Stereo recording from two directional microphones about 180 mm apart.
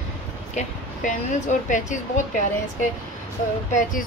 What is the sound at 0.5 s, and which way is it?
Speech, 45° left (ahead or behind).